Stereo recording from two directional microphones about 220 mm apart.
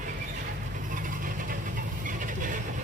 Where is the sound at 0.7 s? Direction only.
35° right (ahead or behind).